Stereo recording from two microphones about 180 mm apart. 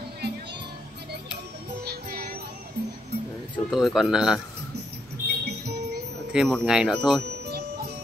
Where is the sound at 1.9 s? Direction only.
60° right (ahead or behind).